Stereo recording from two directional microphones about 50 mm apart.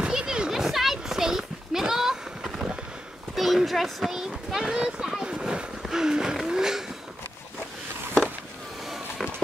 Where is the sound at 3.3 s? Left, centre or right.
Centre.